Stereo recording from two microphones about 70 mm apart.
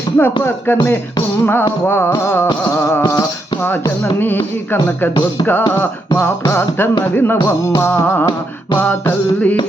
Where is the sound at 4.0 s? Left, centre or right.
Left.